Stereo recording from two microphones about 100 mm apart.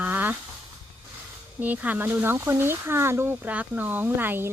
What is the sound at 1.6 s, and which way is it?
Speech, 15° right (ahead or behind).